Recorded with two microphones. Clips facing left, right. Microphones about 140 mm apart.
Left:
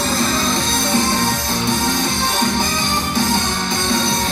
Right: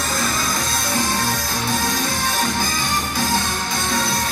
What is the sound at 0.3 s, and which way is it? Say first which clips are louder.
Music: left 4 dB; 25° left (ahead or behind).